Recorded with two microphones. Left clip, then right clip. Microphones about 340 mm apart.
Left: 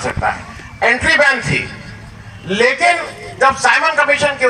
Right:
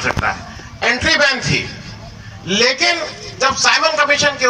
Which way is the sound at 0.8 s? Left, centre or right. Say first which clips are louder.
Left 2 dB; left.